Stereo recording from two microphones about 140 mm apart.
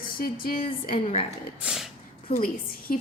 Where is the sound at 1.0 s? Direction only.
50° left (ahead or behind).